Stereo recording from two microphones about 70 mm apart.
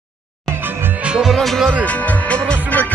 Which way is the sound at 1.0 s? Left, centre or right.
Centre.